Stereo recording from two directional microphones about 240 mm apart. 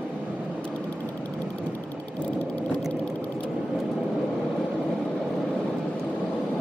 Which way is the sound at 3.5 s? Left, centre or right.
Centre.